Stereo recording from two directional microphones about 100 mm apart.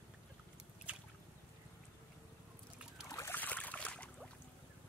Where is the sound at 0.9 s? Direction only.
15° right (ahead or behind).